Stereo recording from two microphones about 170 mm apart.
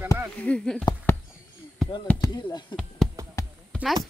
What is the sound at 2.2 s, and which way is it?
Speech, 25° left (ahead or behind).